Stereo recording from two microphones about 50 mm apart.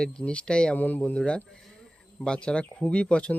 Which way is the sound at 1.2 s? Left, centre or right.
Centre.